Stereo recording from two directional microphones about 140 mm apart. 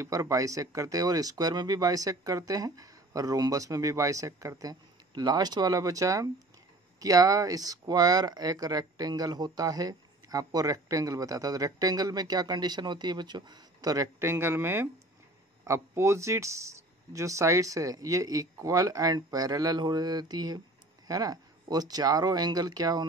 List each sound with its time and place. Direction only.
0.0 s speech: 25° right (ahead or behind)